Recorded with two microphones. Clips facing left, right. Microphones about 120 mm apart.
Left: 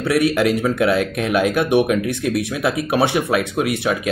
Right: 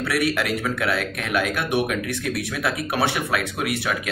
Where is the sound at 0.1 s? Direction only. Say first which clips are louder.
Left 7 dB; 20° left (ahead or behind).